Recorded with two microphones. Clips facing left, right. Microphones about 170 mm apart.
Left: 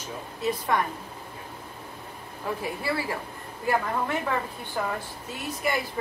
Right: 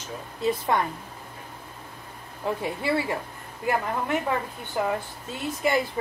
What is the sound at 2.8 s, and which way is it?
Speech, 25° right (ahead or behind).